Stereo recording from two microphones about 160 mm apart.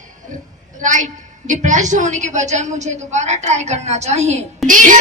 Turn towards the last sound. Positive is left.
turn(degrees=-55)  # may be behind; listen again after turning